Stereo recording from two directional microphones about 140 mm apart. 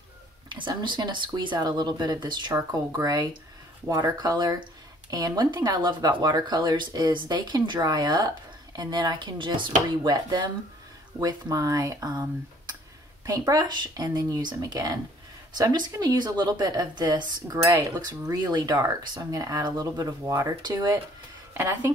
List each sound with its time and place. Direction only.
0.5 s speech: 35° right (ahead or behind); by 21.9 s 20° right (ahead or behind)